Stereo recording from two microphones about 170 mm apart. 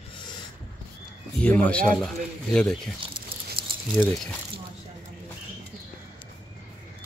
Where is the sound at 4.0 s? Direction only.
5° left (ahead or behind).